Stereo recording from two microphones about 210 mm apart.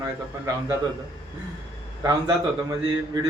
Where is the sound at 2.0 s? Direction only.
20° right (ahead or behind).